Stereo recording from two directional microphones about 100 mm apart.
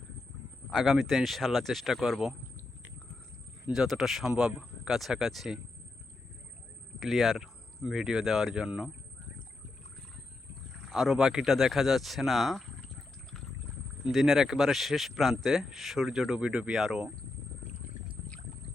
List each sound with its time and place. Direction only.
0.7 s speech: centre (ahead or behind)
3.8 s speech: 5° right (ahead or behind)
7.0 s speech: centre (ahead or behind)
10.8 s speech: centre (ahead or behind)
14.1 s speech: centre (ahead or behind)